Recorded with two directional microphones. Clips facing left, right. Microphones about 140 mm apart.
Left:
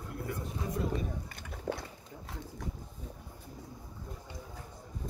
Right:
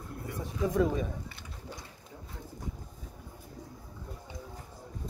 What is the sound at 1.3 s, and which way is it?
Pigeon, 55° left (ahead or behind).